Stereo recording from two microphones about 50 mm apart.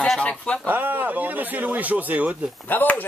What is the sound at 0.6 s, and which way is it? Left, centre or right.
Speech, right.